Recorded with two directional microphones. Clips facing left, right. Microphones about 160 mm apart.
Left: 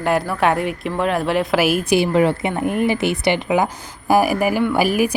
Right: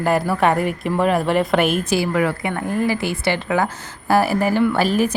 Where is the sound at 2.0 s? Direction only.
25° left (ahead or behind).